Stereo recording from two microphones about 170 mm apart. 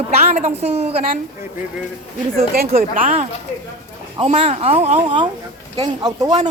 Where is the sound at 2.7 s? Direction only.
50° right (ahead or behind).